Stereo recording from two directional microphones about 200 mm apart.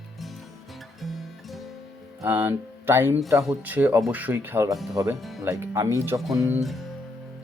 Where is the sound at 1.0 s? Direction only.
Centre (ahead or behind).